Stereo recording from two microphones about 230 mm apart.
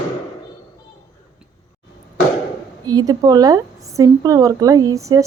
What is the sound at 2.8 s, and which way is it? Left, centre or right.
A woman's voice, centre.